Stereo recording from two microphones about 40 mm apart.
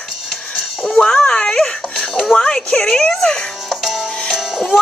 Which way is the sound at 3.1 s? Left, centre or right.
Centre.